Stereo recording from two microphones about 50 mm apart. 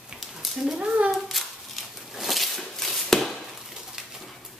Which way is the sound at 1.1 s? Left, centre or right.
Centre.